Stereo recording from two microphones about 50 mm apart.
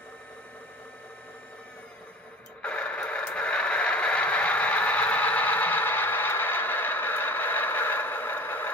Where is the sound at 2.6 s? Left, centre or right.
Left.